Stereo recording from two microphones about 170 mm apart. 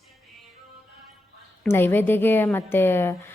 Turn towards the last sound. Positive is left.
turn(degrees=15)  # may be behind; listen again after turning